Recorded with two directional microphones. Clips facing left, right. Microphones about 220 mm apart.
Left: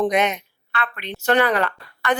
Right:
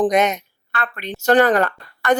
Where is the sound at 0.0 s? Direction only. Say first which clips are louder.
Right 3 dB; 45° right (ahead or behind).